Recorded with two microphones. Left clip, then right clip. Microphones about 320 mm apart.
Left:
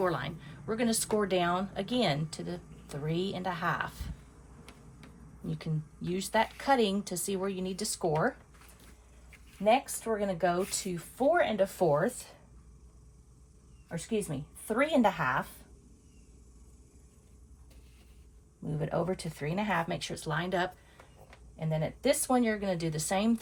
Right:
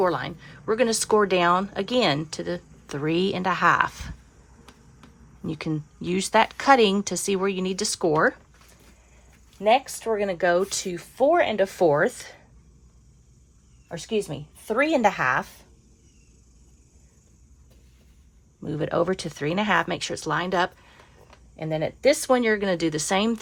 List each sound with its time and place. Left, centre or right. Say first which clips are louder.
0.0 s speech: right 8 dB; centre
5.5 s speech: right 11 dB; right
10.2 s speech: right 8 dB; right
13.8 s speech: right 7 dB; right
18.7 s speech: right 9 dB; right
21.5 s speech: right 7 dB; right
22.0 s speech: right 8 dB; right